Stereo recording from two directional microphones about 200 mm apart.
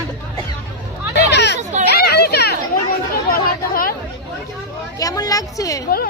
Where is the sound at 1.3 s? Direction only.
60° left (ahead or behind).